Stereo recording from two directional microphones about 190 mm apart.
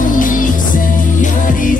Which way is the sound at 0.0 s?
45° left (ahead or behind).